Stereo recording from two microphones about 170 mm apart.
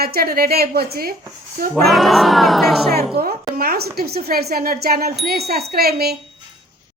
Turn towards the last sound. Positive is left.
turn(degrees=-65)  # may be behind; listen again after turning